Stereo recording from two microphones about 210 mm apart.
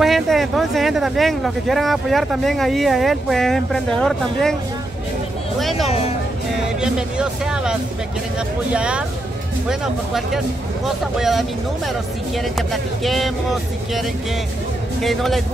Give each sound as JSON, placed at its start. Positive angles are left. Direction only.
{"t": 0.0, "sound": "speech", "side_deg": 0}
{"t": 5.6, "sound": "speech", "side_deg": 0}
{"t": 5.9, "sound": "speech", "side_deg": 30}
{"t": 6.8, "sound": "speech", "side_deg": -5}
{"t": 8.7, "sound": "speech", "side_deg": -5}
{"t": 12.5, "sound": "speech", "side_deg": 0}
{"t": 15.0, "sound": "speech", "side_deg": 0}